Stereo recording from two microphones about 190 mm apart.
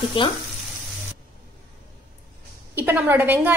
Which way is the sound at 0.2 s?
25° left (ahead or behind).